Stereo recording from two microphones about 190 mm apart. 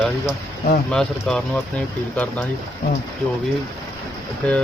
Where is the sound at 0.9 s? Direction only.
5° left (ahead or behind).